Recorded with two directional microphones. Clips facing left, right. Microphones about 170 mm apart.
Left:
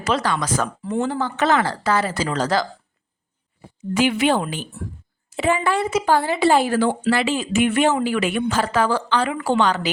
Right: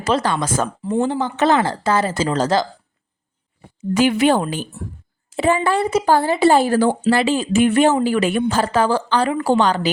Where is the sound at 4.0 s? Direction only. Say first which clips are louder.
Right 3 dB; 40° right (ahead or behind).